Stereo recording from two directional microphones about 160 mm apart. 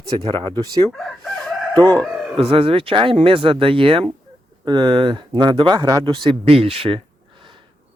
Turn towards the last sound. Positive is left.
turn(degrees=-35)  # may be behind; listen again after turning